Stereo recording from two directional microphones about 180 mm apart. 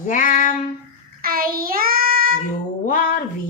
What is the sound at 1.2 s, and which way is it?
Child singing, 55° right (ahead or behind).